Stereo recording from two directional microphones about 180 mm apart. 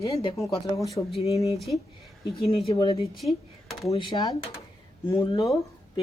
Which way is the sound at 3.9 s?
20° left (ahead or behind).